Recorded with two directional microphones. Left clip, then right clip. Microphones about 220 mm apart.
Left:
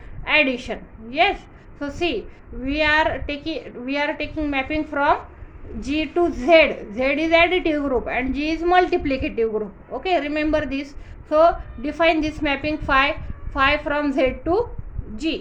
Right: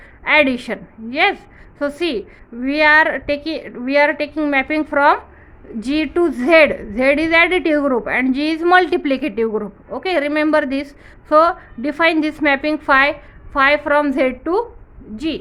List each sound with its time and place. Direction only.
0.3 s a woman's voice: 45° right (ahead or behind)